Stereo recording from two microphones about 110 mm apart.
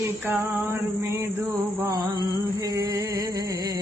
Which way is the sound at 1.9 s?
40° right (ahead or behind).